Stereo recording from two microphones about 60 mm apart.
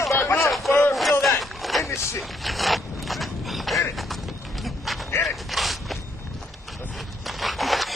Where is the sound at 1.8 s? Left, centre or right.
Left.